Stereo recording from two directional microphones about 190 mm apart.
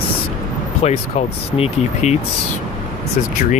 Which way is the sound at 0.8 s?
35° left (ahead or behind).